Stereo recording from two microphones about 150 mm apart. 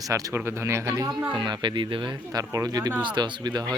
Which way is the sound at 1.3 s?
30° right (ahead or behind).